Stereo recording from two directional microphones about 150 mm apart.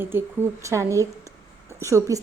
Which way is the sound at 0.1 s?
15° right (ahead or behind).